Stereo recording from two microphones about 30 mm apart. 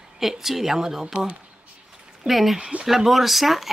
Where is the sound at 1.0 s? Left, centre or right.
Right.